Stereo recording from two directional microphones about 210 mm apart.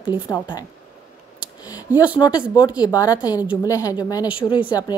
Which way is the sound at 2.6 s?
20° left (ahead or behind).